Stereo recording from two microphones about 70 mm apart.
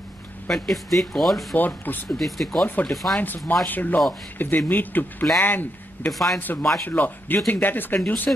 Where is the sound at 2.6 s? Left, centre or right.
Left.